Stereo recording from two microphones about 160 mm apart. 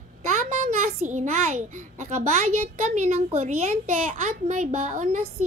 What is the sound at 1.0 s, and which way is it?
A woman's voice, 50° right (ahead or behind).